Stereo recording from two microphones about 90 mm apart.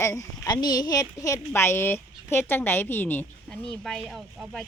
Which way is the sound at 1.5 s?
25° left (ahead or behind).